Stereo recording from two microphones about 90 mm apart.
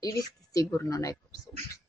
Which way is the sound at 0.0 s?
40° left (ahead or behind).